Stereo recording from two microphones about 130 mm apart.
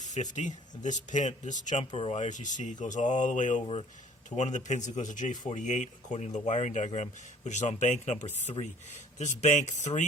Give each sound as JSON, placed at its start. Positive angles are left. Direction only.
{"t": 0.0, "sound": "speech", "side_deg": 65}
{"t": 1.8, "sound": "speech", "side_deg": 45}
{"t": 2.1, "sound": "speech", "side_deg": 65}